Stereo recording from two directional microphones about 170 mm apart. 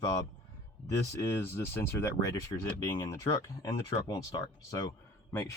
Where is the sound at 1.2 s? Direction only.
15° left (ahead or behind).